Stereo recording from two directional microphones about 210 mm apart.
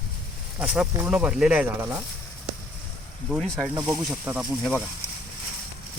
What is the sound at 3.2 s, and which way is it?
Speech, centre (ahead or behind).